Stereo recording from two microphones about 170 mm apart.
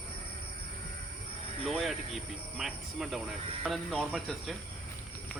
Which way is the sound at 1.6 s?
Centre (ahead or behind).